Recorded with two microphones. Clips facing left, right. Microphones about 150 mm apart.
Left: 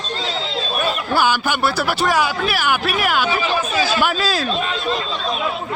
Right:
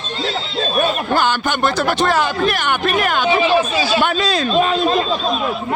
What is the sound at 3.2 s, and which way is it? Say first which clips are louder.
Speech: right 6 dB; 25° right (ahead or behind).